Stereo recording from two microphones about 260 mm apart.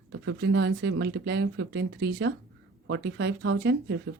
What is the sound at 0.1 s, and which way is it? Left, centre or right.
Speech, right.